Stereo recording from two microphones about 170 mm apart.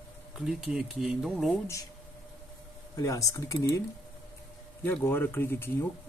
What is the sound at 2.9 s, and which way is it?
Speech, 20° left (ahead or behind).